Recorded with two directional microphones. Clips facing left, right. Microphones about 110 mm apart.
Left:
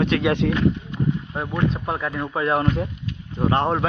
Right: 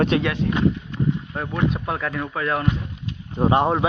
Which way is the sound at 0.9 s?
15° left (ahead or behind).